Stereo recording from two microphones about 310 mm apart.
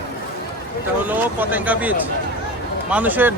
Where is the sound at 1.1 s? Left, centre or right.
Centre.